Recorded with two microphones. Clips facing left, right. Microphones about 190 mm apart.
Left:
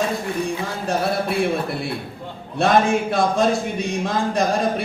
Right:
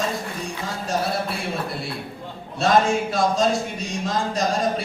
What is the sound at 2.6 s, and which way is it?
A man's voice, 55° left (ahead or behind).